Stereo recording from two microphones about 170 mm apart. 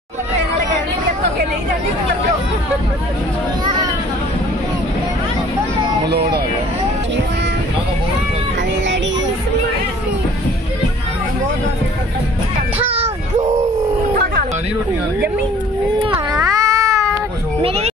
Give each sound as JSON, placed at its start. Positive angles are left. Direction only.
{"t": 6.0, "sound": "speech", "side_deg": -75}
{"t": 16.5, "sound": "cat", "side_deg": -20}
{"t": 17.6, "sound": "a sound", "side_deg": -35}